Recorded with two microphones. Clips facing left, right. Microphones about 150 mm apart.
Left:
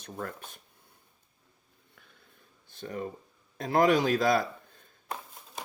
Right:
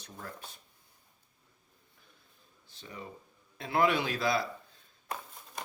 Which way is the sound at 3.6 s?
40° left (ahead or behind).